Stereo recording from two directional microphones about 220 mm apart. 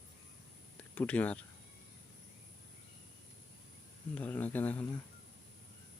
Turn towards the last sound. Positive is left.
turn(degrees=10)  # may be behind; listen again after turning